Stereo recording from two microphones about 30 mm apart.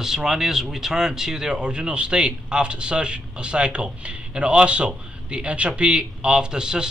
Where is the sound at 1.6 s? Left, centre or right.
Right.